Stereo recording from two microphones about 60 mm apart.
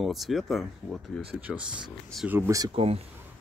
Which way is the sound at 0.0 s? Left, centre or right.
Centre.